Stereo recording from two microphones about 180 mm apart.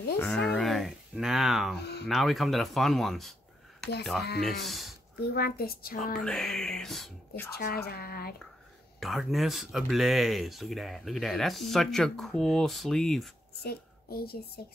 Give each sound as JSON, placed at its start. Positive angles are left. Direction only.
{"t": 0.2, "sound": "a sound", "side_deg": 5}
{"t": 2.0, "sound": "speech", "side_deg": 0}
{"t": 5.3, "sound": "speech", "side_deg": 60}
{"t": 6.1, "sound": "speech", "side_deg": 0}
{"t": 7.5, "sound": "speech", "side_deg": 60}
{"t": 9.0, "sound": "speech", "side_deg": 0}
{"t": 13.7, "sound": "speech", "side_deg": 60}